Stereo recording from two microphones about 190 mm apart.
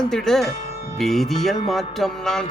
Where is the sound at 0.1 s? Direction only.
Centre (ahead or behind).